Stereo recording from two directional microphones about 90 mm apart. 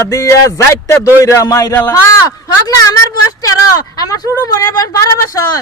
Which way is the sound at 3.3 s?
45° left (ahead or behind).